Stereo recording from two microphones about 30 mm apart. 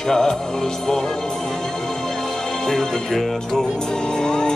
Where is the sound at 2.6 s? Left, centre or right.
Centre.